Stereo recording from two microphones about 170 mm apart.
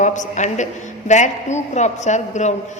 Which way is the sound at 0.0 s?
45° left (ahead or behind).